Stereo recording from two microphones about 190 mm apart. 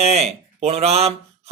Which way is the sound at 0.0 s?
35° right (ahead or behind).